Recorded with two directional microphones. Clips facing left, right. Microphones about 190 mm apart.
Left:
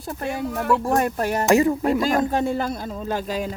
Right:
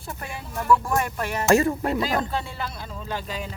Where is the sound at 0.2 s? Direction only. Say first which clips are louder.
Left 9 dB; 45° left (ahead or behind).